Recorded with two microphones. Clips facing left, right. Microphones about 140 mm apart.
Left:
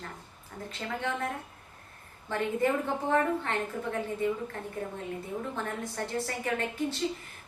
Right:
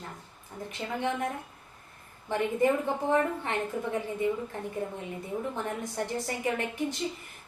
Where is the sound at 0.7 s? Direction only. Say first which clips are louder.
Right 3 dB; 15° right (ahead or behind).